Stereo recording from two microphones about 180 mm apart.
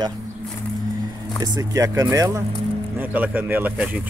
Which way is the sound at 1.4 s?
20° right (ahead or behind).